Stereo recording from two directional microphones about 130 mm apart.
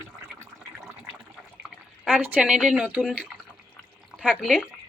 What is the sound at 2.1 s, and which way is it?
Speech, 10° right (ahead or behind).